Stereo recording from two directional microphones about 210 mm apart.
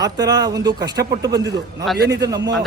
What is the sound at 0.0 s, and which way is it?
A man's voice, 15° right (ahead or behind).